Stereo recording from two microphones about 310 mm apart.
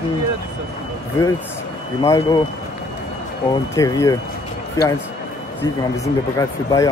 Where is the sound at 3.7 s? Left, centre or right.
Centre.